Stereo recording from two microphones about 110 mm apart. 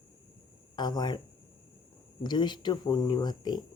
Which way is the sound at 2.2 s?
40° left (ahead or behind).